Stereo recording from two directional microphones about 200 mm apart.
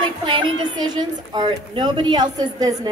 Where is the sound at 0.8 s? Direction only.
20° right (ahead or behind).